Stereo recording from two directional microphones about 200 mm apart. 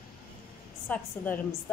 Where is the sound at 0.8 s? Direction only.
10° left (ahead or behind).